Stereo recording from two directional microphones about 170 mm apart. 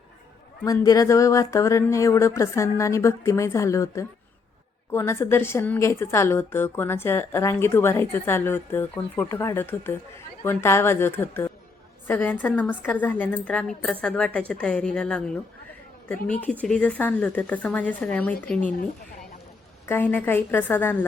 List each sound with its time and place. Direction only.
0.6 s a woman's voice: 20° left (ahead or behind)
19.9 s a woman's voice: 10° left (ahead or behind)